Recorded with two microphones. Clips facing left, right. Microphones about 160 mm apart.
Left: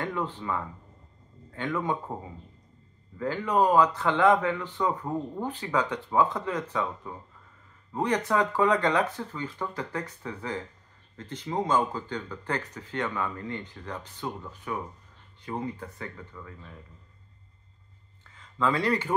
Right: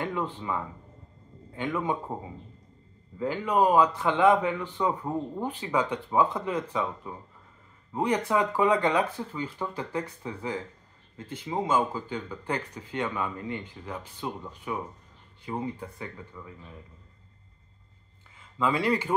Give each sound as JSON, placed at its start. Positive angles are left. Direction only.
{"t": 0.0, "sound": "a man's voice", "side_deg": -15}
{"t": 3.2, "sound": "speech", "side_deg": -15}
{"t": 18.3, "sound": "speech", "side_deg": -10}